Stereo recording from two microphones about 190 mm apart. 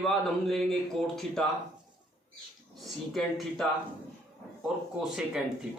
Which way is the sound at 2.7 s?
Centre (ahead or behind).